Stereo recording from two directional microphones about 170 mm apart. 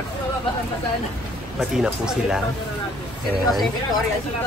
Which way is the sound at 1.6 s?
5° right (ahead or behind).